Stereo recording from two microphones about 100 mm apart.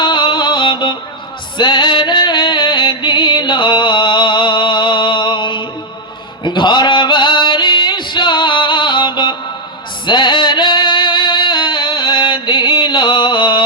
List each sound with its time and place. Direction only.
0.0 s music: 50° left (ahead or behind)
6.4 s a sound: 50° left (ahead or behind)
10.1 s music: 50° left (ahead or behind)